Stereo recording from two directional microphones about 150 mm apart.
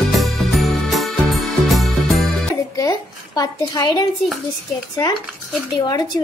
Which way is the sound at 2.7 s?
25° left (ahead or behind).